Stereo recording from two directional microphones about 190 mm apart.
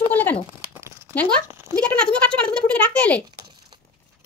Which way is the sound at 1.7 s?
5° left (ahead or behind).